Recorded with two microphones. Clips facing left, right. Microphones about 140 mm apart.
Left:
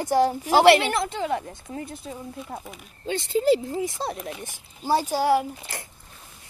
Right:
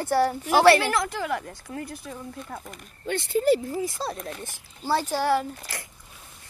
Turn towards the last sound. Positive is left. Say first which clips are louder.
# left 2 dB
turn(degrees=10)  # may be behind; listen again after turning